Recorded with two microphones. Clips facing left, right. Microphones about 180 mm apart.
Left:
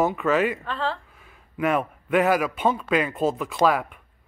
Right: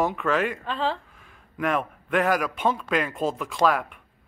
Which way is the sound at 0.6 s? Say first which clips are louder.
Right 1 dB; 15° right (ahead or behind).